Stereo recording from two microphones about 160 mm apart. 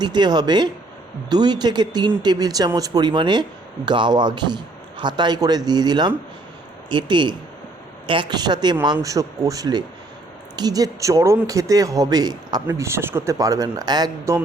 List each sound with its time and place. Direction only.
0.0 s speech: 25° right (ahead or behind)